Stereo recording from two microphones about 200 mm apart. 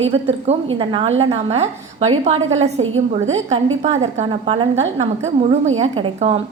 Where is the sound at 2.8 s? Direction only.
80° right.